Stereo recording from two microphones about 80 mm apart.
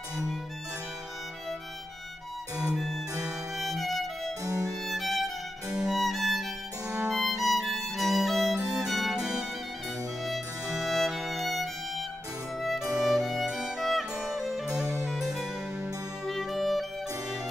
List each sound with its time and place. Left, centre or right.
2.7 s music: centre
3.6 s violin: centre
4.5 s violin: right
4.8 s violin: centre
6.9 s music: centre
13.0 s music: centre